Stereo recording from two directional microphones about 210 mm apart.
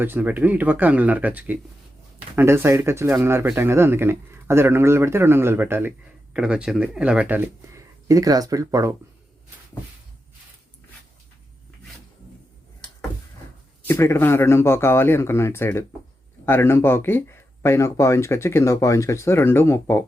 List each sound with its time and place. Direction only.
0.0 s speech: 10° right (ahead or behind)
13.8 s speech: 10° left (ahead or behind)